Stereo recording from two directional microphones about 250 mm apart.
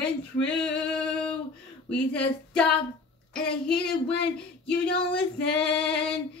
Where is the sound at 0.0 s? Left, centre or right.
Centre.